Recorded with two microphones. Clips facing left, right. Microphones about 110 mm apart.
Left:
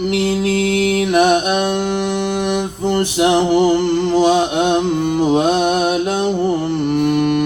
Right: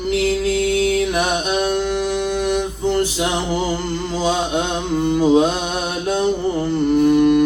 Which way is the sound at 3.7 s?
65° left (ahead or behind).